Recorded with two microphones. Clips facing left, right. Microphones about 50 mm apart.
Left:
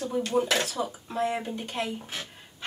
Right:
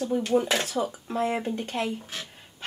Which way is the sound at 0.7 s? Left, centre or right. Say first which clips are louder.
Right 3 dB; right.